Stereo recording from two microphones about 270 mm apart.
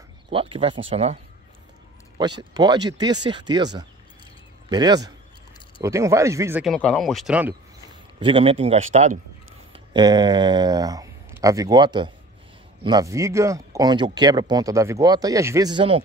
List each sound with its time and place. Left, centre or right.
0.3 s a man's voice: centre
2.5 s speech: centre
8.2 s a man's voice: centre